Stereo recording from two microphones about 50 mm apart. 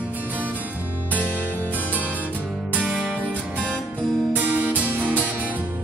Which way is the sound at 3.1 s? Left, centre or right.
Right.